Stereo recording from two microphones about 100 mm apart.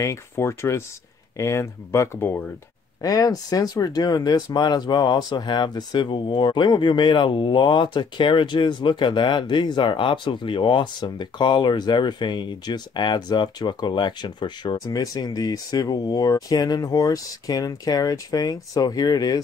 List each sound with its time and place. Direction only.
0.0 s speech: 30° left (ahead or behind)
2.1 s speech: 20° left (ahead or behind)
3.0 s speech: 40° left (ahead or behind)